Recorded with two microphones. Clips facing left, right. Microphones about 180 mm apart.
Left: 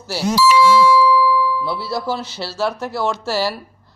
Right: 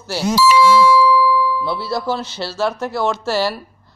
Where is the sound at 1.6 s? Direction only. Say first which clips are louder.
Right 1 dB; 5° left (ahead or behind).